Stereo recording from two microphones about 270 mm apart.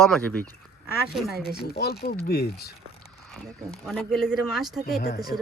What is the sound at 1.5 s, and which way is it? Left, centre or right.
Speech, left.